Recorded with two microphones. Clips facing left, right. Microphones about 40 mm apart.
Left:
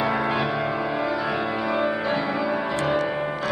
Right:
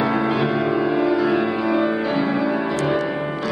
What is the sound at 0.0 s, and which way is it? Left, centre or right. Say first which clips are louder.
Music: right 3 dB; centre.